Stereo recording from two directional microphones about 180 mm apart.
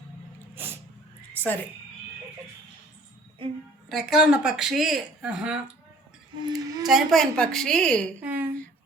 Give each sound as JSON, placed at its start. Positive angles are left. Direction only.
{"t": 3.8, "sound": "speech", "side_deg": 0}
{"t": 6.4, "sound": "a sound", "side_deg": -20}
{"t": 6.8, "sound": "speech", "side_deg": 0}
{"t": 8.2, "sound": "speech", "side_deg": -10}